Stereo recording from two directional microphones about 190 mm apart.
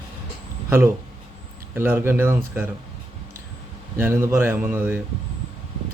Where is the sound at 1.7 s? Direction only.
10° right (ahead or behind).